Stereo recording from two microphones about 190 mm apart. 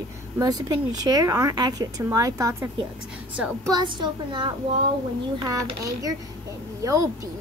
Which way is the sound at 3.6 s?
20° right (ahead or behind).